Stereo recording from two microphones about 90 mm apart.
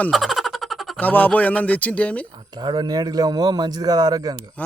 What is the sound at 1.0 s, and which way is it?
Speech, 20° left (ahead or behind).